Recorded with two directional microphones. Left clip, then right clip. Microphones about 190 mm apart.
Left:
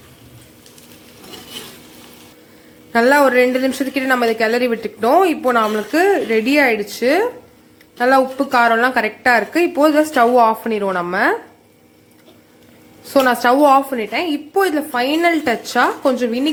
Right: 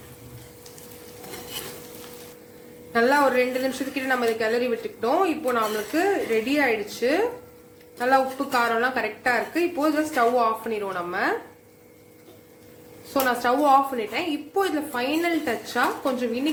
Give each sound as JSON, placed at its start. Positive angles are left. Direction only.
{"t": 2.9, "sound": "a woman's voice", "side_deg": 45}
{"t": 13.1, "sound": "a woman's voice", "side_deg": 50}